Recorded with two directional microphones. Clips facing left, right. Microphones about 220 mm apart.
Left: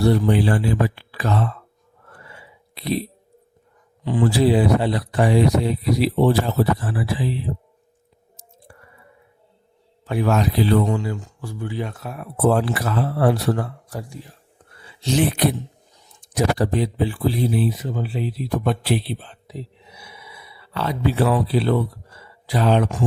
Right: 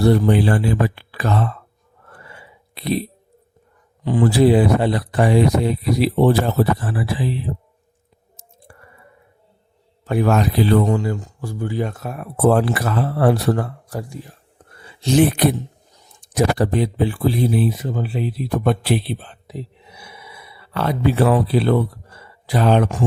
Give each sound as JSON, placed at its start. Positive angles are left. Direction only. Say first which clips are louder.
{"t": 0.0, "sound": "speech", "louder": "right 2 dB", "side_deg": -50}
{"t": 2.2, "sound": "a sound", "louder": "right 1 dB", "side_deg": -55}
{"t": 4.0, "sound": "speech", "louder": "right 3 dB", "side_deg": -45}
{"t": 8.7, "sound": "squish", "louder": "right 1 dB", "side_deg": -55}
{"t": 10.1, "sound": "speech", "louder": "right 3 dB", "side_deg": -50}
{"t": 14.7, "sound": "a sound", "louder": "right 4 dB", "side_deg": -50}
{"t": 16.2, "sound": "speech", "louder": "right 2 dB", "side_deg": -55}